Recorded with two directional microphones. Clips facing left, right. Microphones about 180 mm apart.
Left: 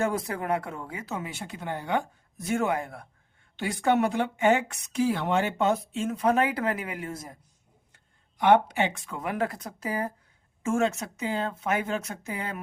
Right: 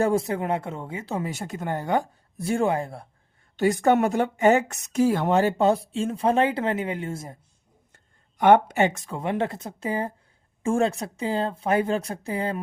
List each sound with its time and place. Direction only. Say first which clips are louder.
0.0 s speech: right 5 dB; 30° right (ahead or behind)
3.6 s speech: right 5 dB; 45° right (ahead or behind); by 7.3 s 25° right (ahead or behind)
7.9 s speech: right 5 dB; 50° right (ahead or behind)
9.1 s speech: right 3 dB; 25° right (ahead or behind)